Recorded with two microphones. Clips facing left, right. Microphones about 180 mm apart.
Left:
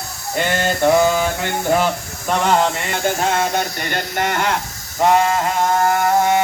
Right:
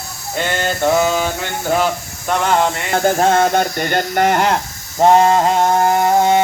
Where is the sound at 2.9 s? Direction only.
40° right (ahead or behind).